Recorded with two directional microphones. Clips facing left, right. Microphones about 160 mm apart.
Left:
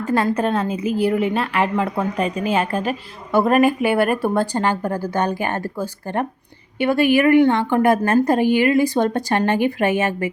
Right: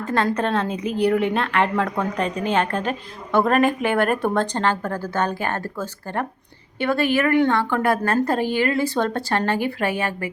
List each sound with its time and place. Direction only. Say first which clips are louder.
0.0 s a woman's voice: left 3 dB; 10° left (ahead or behind)